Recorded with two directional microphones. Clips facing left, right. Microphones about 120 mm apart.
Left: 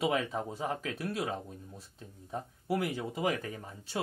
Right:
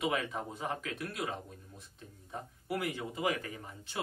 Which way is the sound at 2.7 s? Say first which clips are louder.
Left 4 dB; 35° left (ahead or behind).